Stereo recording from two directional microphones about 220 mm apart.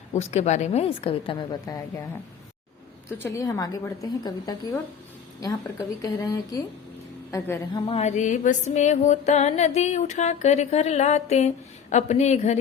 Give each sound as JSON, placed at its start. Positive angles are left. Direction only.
{"t": 0.1, "sound": "a woman's voice", "side_deg": 30}
{"t": 3.1, "sound": "a woman's voice", "side_deg": 10}
{"t": 6.0, "sound": "a woman's voice", "side_deg": 15}
{"t": 7.9, "sound": "music", "side_deg": 30}